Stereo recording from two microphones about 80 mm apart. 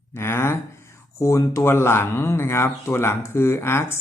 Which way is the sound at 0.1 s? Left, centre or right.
Left.